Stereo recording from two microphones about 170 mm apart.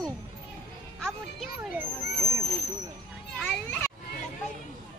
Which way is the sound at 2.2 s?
20° right (ahead or behind).